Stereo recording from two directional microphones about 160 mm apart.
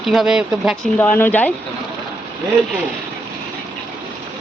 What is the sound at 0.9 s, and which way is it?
Speech, 10° left (ahead or behind).